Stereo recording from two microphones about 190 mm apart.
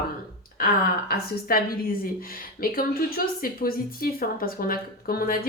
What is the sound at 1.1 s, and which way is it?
A woman's voice, 50° left (ahead or behind).